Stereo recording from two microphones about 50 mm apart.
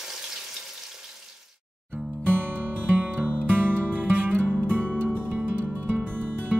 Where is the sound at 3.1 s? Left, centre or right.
Right.